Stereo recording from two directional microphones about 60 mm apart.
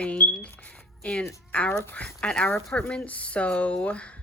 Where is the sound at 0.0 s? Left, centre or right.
Centre.